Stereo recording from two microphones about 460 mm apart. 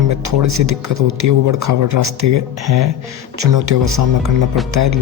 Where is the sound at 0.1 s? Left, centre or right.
Right.